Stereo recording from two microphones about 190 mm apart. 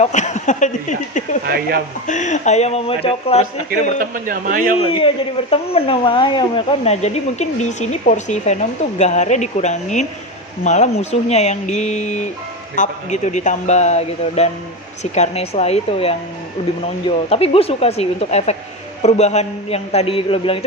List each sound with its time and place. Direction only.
0.0 s a man's voice: 35° left (ahead or behind)
1.5 s a man's voice: 50° right (ahead or behind)
2.0 s a man's voice: 40° left (ahead or behind)
3.7 s a man's voice: 45° right (ahead or behind)
4.8 s a man's voice: 30° left (ahead or behind)